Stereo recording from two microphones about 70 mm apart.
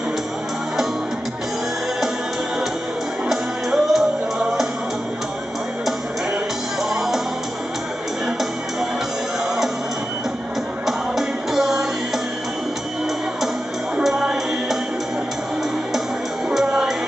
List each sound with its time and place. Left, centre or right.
3.3 s music: centre
6.8 s music: centre
10.9 s music: centre
14.0 s music: centre
16.4 s music: centre